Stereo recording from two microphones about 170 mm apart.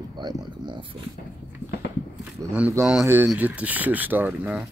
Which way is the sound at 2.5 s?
10° right (ahead or behind).